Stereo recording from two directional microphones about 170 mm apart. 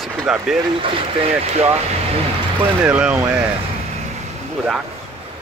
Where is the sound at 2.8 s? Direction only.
10° right (ahead or behind).